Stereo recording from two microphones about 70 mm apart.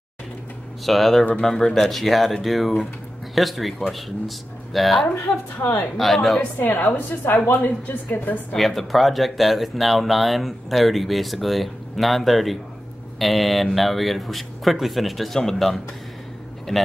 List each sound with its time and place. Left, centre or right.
0.8 s speech: centre
4.7 s speech: centre
6.6 s a woman's voice: left
8.5 s speech: centre